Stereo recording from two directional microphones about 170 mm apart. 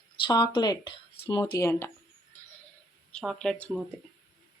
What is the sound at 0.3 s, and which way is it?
Speech, 25° left (ahead or behind).